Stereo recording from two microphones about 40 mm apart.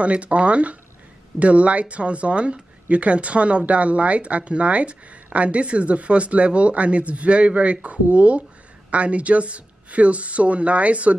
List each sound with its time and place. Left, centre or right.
0.0 s speech: right